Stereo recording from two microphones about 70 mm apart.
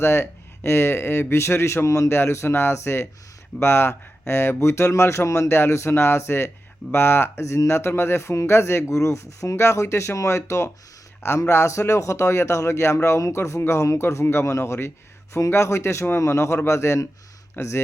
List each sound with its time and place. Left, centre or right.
0.0 s speech: left
17.6 s speech: left